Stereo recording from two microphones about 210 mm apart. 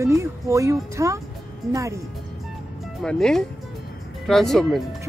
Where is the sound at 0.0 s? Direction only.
15° right (ahead or behind).